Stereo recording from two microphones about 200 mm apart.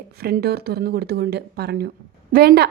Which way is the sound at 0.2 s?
50° right (ahead or behind).